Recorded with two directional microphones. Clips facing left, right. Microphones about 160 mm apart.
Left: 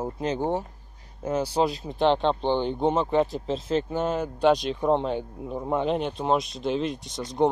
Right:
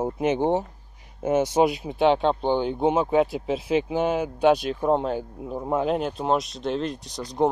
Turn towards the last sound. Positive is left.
turn(degrees=0)  # may be behind; listen again after turning